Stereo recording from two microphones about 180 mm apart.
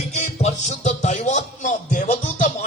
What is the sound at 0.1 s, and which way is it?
Music, 40° left (ahead or behind).